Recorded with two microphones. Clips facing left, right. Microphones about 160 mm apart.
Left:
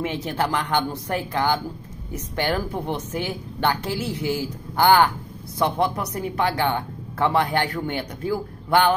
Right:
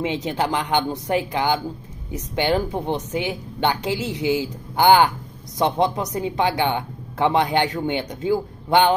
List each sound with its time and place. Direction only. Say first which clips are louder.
0.0 s a woman's voice: right 2 dB; 15° right (ahead or behind)